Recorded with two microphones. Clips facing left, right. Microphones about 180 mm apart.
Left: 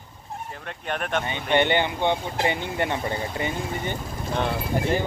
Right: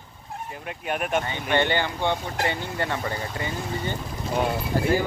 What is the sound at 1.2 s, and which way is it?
Speech, 20° left (ahead or behind).